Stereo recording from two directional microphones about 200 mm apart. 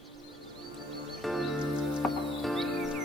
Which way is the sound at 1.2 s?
Centre (ahead or behind).